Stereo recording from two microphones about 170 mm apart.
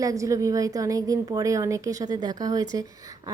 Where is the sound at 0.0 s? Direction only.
20° right (ahead or behind).